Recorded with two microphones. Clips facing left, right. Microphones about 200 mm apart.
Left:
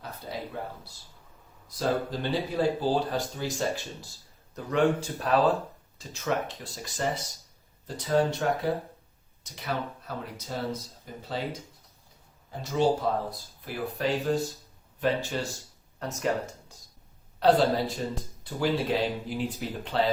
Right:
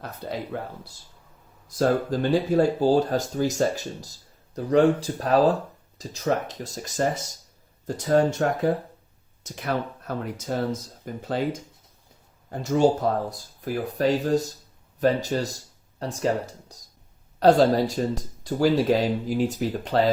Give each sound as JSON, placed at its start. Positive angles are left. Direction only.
{"t": 1.6, "sound": "speech", "side_deg": -45}
{"t": 12.5, "sound": "speech", "side_deg": -45}